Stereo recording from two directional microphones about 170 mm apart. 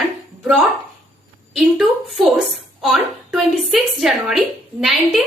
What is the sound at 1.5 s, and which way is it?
A woman's voice, centre (ahead or behind).